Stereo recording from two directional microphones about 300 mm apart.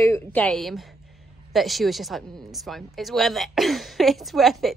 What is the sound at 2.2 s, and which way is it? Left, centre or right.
Speech, centre.